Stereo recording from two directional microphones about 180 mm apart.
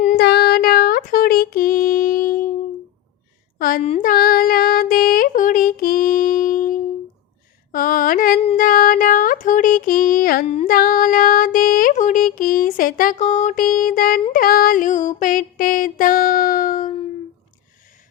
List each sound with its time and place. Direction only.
0.2 s a sound: 65° left (ahead or behind)
3.6 s speech: 50° left (ahead or behind)
4.0 s child singing: 50° left (ahead or behind)
7.7 s a sound: 50° left (ahead or behind)
10.4 s music: 35° left (ahead or behind)
10.8 s female singing: 50° left (ahead or behind)
14.3 s music: 55° left (ahead or behind)